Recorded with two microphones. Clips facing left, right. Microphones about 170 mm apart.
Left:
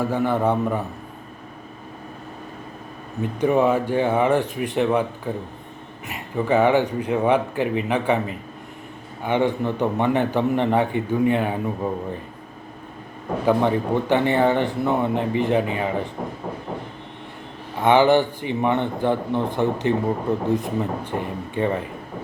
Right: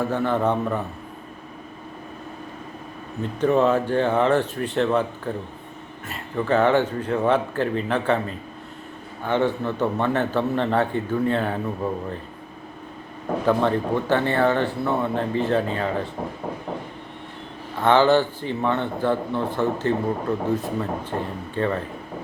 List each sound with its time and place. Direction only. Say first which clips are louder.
0.0 s a man's voice: left 1 dB; 10° left (ahead or behind)
3.4 s a man's voice: even; 10° left (ahead or behind)
13.4 s a man's voice: left 2 dB; 15° left (ahead or behind)
17.7 s a man's voice: left 1 dB; 15° left (ahead or behind)